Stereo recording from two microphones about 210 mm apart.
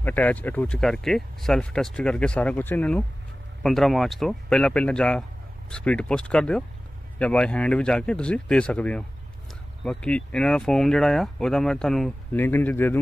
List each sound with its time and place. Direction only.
0.0 s speech: 10° left (ahead or behind)